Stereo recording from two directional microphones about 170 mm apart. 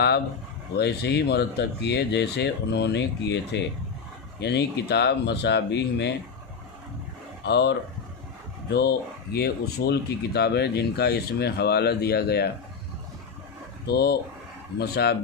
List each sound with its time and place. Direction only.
0.8 s speech: 80° left
4.4 s speech: 80° left
7.4 s speech: 90° left
8.7 s speech: 75° left (ahead or behind)
13.8 s speech: 70° left (ahead or behind)